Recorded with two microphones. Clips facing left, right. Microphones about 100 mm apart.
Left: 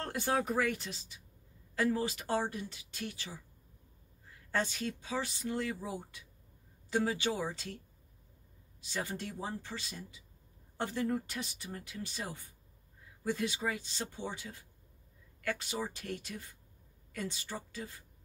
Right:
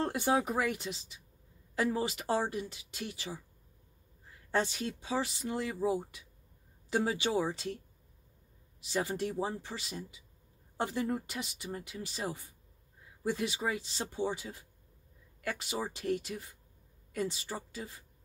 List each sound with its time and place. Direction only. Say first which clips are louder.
0.0 s speech: right 3 dB; 20° right (ahead or behind)
4.5 s speech: right 2 dB; 25° right (ahead or behind)
8.8 s speech: right 6 dB; 20° right (ahead or behind)
13.2 s speech: right 1 dB; 20° right (ahead or behind)